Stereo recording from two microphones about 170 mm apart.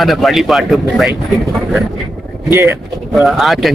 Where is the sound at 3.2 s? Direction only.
Centre (ahead or behind).